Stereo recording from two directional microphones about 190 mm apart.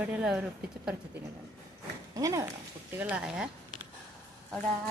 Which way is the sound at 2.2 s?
15° right (ahead or behind).